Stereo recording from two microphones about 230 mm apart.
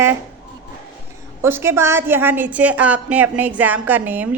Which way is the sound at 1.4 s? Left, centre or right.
Centre.